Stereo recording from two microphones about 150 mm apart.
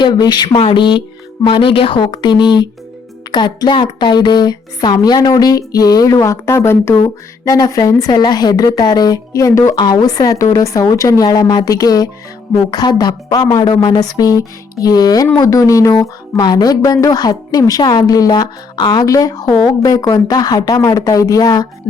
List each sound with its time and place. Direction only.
0.0 s a woman's voice: 30° left (ahead or behind)